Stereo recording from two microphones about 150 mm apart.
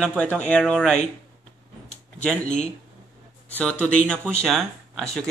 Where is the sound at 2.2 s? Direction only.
10° left (ahead or behind).